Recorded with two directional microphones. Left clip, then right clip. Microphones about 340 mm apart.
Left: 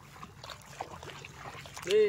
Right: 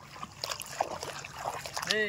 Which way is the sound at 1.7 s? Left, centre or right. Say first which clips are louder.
Left 4 dB; centre.